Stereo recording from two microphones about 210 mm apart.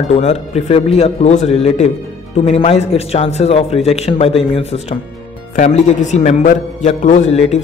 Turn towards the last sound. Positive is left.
turn(degrees=30)  # may be behind; listen again after turning